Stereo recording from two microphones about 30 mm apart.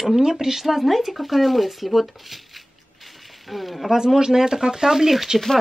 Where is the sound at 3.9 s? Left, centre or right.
Centre.